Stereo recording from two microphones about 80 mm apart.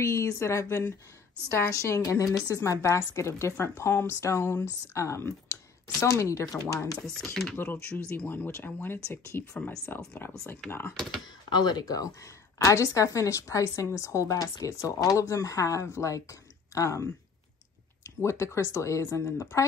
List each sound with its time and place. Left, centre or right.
0.0 s speech: left
2.0 s a woman's voice: left
8.2 s speech: left
11.0 s speech: centre
11.5 s a woman's voice: left